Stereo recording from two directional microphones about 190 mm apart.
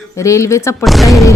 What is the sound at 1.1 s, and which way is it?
Speech, 15° left (ahead or behind).